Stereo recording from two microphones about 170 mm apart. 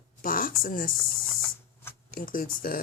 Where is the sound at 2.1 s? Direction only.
55° left (ahead or behind).